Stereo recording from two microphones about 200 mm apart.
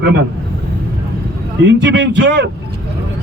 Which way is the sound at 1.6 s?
60° right (ahead or behind).